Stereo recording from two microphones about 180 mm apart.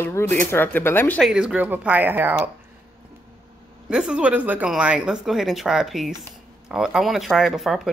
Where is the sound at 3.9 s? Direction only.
5° right (ahead or behind).